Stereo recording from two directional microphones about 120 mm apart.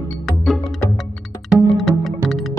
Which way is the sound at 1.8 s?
Centre (ahead or behind).